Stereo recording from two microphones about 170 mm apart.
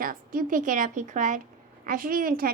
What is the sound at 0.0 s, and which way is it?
A woman's voice, 55° right (ahead or behind).